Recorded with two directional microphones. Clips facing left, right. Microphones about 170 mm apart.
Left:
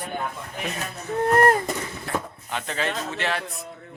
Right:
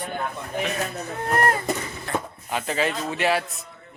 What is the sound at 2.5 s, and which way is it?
Speech, 5° right (ahead or behind).